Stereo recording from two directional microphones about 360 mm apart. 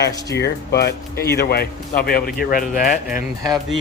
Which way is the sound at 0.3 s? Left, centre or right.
Left.